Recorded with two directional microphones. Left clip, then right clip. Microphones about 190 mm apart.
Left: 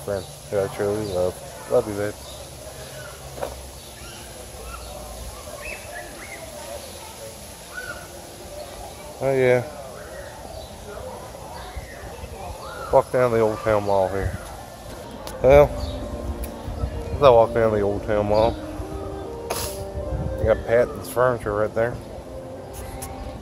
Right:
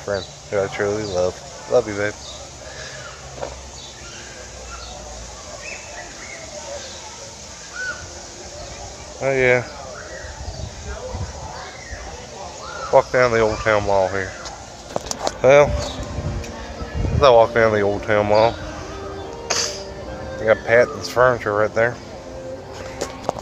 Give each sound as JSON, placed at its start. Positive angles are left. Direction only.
{"t": 0.0, "sound": "speech", "side_deg": -5}
{"t": 9.2, "sound": "speech", "side_deg": 15}
{"t": 12.9, "sound": "speech", "side_deg": 5}
{"t": 15.4, "sound": "speech", "side_deg": 5}
{"t": 17.2, "sound": "speech", "side_deg": 5}
{"t": 19.4, "sound": "music", "side_deg": 20}
{"t": 20.4, "sound": "speech", "side_deg": -5}